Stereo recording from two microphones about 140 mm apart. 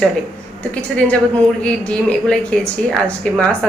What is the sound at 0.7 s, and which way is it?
A man's voice, 10° left (ahead or behind).